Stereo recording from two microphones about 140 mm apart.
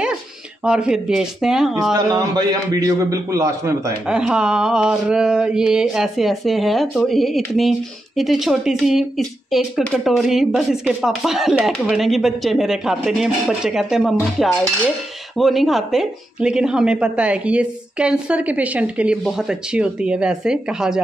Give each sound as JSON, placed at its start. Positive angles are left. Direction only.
{"t": 0.7, "sound": "speech", "side_deg": -5}
{"t": 2.0, "sound": "a man's voice", "side_deg": -30}
{"t": 4.1, "sound": "speech", "side_deg": -5}
{"t": 15.3, "sound": "speech", "side_deg": 0}